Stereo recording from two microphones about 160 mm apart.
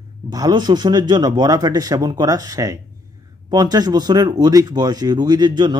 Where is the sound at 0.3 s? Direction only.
25° right (ahead or behind).